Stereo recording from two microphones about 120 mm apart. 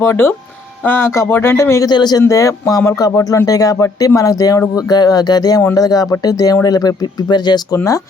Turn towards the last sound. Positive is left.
turn(degrees=30)  # may be behind; listen again after turning